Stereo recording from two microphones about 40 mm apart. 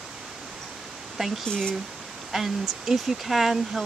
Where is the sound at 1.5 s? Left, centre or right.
Left.